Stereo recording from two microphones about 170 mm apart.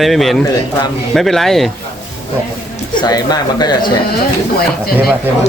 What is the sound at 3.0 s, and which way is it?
Speech, 25° left (ahead or behind).